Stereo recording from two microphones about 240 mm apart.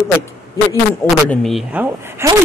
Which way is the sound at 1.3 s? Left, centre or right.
Centre.